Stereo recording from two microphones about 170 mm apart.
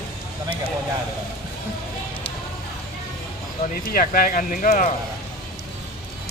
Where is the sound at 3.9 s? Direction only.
60° left (ahead or behind).